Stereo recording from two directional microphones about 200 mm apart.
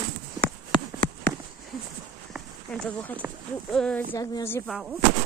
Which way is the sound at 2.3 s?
5° left (ahead or behind).